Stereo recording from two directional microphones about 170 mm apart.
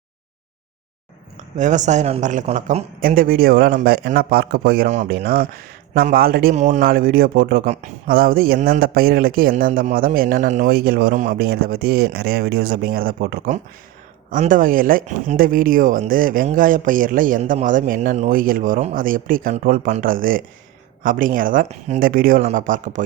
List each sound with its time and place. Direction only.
1.5 s a man's voice: 45° right (ahead or behind)
6.5 s a man's voice: 45° right (ahead or behind)
6.8 s a man's voice: 60° right (ahead or behind); by 22.0 s 40° right (ahead or behind)
22.0 s a man's voice: 55° right (ahead or behind)